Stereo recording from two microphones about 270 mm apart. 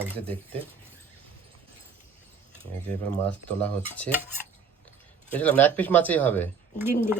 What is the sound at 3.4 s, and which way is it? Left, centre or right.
Speech, centre.